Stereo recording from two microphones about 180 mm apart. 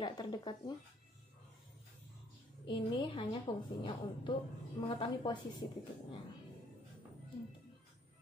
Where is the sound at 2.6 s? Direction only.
30° left (ahead or behind).